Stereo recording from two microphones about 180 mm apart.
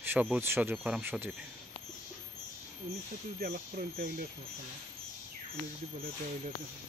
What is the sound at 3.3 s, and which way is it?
Speech, 50° right (ahead or behind).